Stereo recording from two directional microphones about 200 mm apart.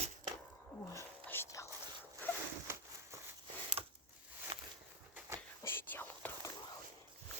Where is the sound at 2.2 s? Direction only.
10° left (ahead or behind).